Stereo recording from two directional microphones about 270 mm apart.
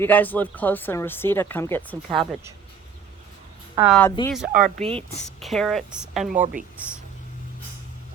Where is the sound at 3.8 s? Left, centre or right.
Centre.